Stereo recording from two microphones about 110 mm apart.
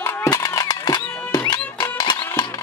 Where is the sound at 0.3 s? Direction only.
35° left (ahead or behind).